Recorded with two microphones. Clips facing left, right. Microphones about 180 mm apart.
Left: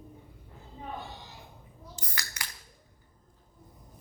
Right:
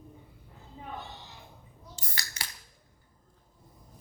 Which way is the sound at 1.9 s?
30° right (ahead or behind).